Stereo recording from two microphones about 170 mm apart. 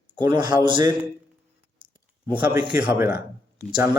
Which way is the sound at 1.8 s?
30° right (ahead or behind).